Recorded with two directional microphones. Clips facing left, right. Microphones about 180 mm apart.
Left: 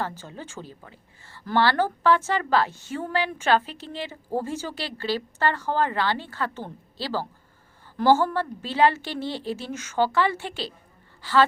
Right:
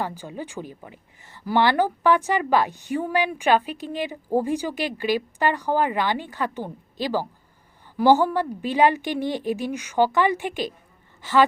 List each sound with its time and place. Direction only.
0.0 s a woman's voice: 15° right (ahead or behind)